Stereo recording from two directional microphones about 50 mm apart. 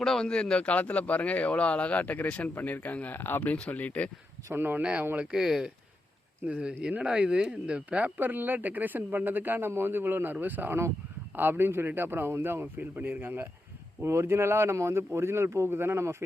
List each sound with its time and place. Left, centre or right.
0.0 s speech: centre
0.3 s speech: centre
3.2 s speech: left
3.7 s speech: left
4.5 s speech: right
4.8 s speech: right
5.2 s speech: centre
6.5 s speech: centre
8.3 s speech: right
11.3 s a man's voice: right
12.7 s a man's voice: right
14.0 s speech: right
14.3 s speech: right